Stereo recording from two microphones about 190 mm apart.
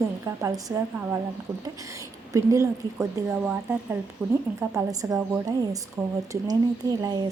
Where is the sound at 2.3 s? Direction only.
15° right (ahead or behind).